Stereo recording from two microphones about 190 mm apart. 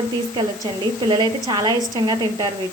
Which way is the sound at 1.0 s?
25° right (ahead or behind).